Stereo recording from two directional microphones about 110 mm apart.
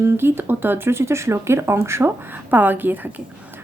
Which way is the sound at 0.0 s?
20° right (ahead or behind).